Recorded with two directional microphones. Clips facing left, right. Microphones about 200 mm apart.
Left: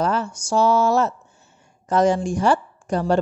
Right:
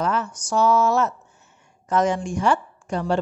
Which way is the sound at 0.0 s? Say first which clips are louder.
Left 2 dB; 30° left (ahead or behind).